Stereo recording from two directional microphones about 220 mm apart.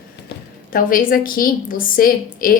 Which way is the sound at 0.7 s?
40° left (ahead or behind).